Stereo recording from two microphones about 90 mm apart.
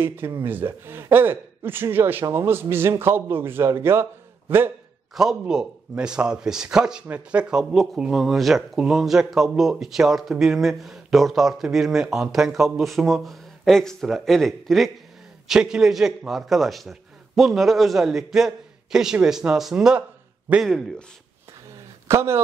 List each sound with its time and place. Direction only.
0.0 s a man's voice: 25° right (ahead or behind)
5.1 s a man's voice: 5° right (ahead or behind)
7.7 s a man's voice: centre (ahead or behind)
22.0 s speech: 30° right (ahead or behind)